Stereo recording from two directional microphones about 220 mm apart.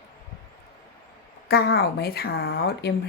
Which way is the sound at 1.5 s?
45° left (ahead or behind).